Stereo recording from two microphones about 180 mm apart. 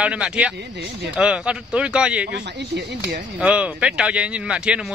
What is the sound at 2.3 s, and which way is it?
Speech, 70° right (ahead or behind).